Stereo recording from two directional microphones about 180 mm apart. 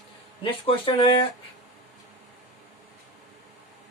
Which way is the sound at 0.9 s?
25° left (ahead or behind).